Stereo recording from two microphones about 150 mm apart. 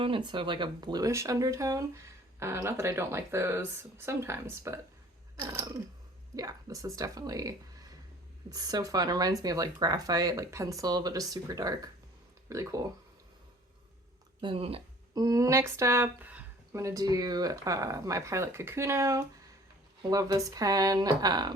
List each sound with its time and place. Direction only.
0.3 s speech: 30° right (ahead or behind)
14.4 s speech: 40° right (ahead or behind)
15.1 s speech: 25° right (ahead or behind)